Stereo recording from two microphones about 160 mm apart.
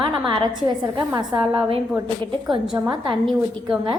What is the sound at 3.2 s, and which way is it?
Speech, centre (ahead or behind).